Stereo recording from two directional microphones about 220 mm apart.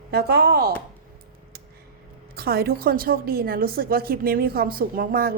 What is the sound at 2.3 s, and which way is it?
A woman's voice, 45° right (ahead or behind).